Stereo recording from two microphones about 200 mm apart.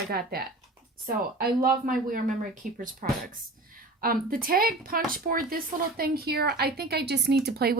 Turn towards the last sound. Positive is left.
turn(degrees=-50)  # may be behind; listen again after turning